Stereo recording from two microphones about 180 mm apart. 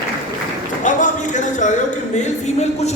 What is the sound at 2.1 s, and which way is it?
Speech, 40° left (ahead or behind).